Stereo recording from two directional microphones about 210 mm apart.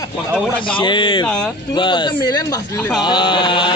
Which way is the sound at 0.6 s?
25° left (ahead or behind).